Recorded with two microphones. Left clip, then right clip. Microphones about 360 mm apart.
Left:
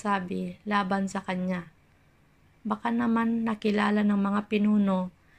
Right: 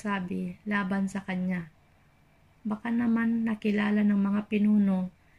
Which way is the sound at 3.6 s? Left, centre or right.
Centre.